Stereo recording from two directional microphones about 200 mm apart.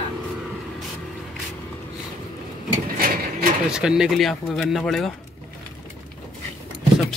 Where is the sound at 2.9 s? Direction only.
45° right (ahead or behind).